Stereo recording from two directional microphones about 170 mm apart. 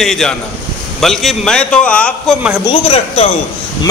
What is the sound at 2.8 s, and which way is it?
Speech, 35° left (ahead or behind).